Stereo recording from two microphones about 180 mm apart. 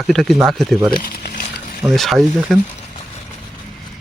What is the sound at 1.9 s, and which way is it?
Speech, centre (ahead or behind).